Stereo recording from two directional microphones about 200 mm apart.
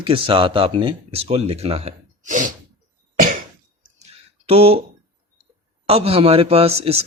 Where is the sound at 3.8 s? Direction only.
30° right (ahead or behind).